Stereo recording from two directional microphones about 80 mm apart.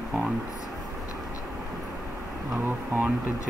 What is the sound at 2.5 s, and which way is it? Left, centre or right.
Speech, right.